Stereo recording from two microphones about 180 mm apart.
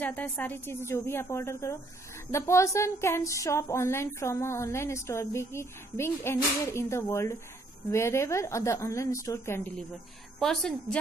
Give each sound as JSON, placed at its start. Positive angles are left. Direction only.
{"t": 0.0, "sound": "a woman's voice", "side_deg": 10}
{"t": 10.4, "sound": "a woman's voice", "side_deg": 0}